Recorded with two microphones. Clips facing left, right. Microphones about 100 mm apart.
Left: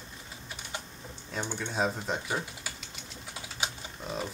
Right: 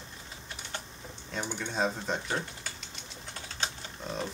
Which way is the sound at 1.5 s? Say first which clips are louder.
Even; centre (ahead or behind).